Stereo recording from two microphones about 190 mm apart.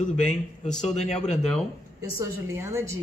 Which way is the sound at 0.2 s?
5° left (ahead or behind).